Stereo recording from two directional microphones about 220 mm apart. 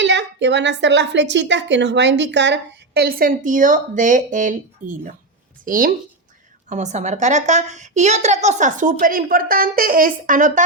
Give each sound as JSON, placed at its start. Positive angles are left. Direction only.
{"t": 0.0, "sound": "a woman's voice", "side_deg": -55}